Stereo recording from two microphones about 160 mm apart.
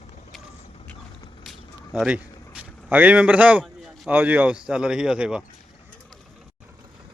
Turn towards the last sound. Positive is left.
turn(degrees=-5)  # may be behind; listen again after turning